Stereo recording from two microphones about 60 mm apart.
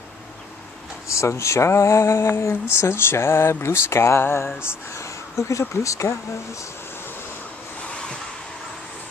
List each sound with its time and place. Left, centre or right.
1.0 s a sound: left
4.9 s speech: left
7.9 s vehicle: centre